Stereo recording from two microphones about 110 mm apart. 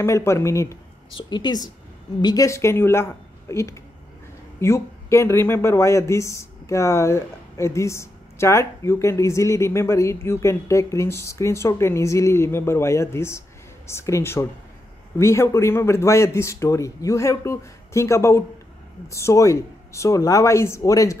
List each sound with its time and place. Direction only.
0.0 s speech: 25° left (ahead or behind)
1.1 s a woman's voice: 40° left (ahead or behind)